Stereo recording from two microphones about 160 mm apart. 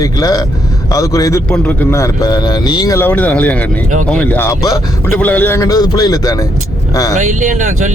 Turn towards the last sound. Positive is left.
turn(degrees=-50)  # may be behind; listen again after turning